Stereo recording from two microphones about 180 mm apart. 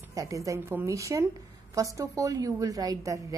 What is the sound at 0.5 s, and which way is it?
A woman's voice, 15° right (ahead or behind).